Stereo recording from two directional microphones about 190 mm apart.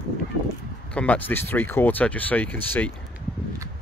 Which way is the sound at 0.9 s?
5° left (ahead or behind).